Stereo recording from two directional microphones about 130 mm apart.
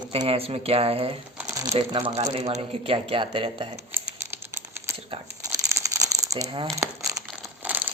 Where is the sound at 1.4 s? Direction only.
15° right (ahead or behind).